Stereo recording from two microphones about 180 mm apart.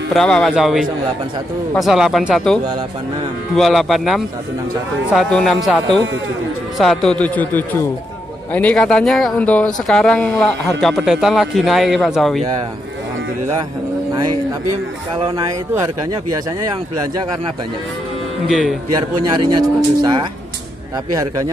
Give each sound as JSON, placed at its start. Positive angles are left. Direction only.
{"t": 0.1, "sound": "speech", "side_deg": 5}
{"t": 15.1, "sound": "a man's voice", "side_deg": -20}
{"t": 18.5, "sound": "speech", "side_deg": -5}
{"t": 18.9, "sound": "a man's voice", "side_deg": -20}